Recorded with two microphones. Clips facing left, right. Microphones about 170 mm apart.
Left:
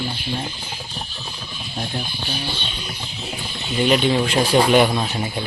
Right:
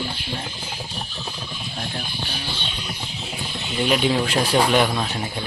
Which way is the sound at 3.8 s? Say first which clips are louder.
Left 3 dB; centre (ahead or behind).